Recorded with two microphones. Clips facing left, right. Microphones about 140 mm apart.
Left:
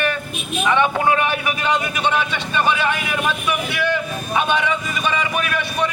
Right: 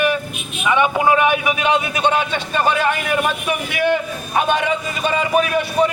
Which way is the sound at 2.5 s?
40° right (ahead or behind).